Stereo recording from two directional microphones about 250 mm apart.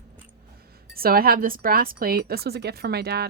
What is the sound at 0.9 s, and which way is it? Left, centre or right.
Speech, right.